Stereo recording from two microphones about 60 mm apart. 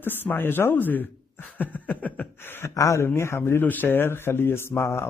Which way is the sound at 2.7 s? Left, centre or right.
Left.